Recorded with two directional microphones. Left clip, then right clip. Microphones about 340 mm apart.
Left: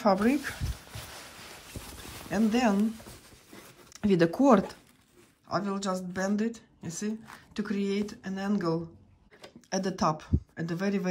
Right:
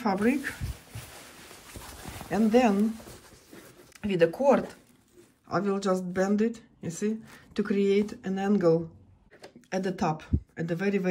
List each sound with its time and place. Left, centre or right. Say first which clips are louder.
0.0 s speech: left 2 dB; centre
1.8 s clip-clop: right 4 dB; centre
3.9 s speech: right 1 dB; centre
5.5 s speech: right 4 dB; centre